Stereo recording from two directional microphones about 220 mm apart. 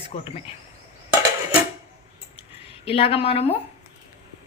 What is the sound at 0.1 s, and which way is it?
Speech, 25° left (ahead or behind).